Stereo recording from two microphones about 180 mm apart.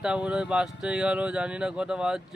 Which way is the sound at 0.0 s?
5° right (ahead or behind).